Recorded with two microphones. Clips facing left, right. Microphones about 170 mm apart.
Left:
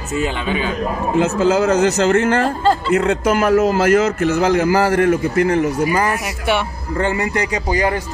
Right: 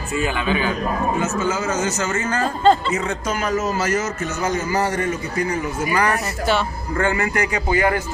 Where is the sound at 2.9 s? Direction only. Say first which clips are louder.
Left 8 dB; 60° left (ahead or behind).